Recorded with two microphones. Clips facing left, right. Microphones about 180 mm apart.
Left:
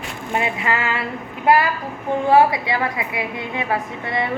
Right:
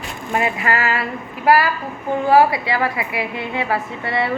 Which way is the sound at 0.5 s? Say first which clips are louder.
Right 2 dB; 25° left (ahead or behind).